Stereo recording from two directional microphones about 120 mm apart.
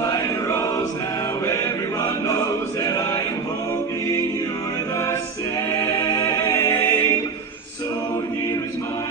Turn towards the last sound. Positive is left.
turn(degrees=30)  # may be behind; listen again after turning